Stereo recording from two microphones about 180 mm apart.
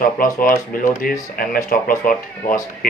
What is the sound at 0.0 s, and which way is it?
Speech, 50° left (ahead or behind).